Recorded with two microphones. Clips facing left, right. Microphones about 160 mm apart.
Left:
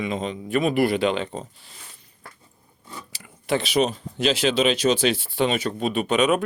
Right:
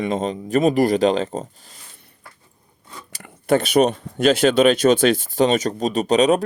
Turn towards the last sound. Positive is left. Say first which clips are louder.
# right 4 dB
turn(degrees=-35)  # may be behind; listen again after turning